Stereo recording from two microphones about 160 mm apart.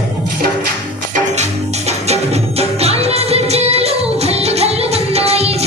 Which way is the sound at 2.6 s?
40° right (ahead or behind).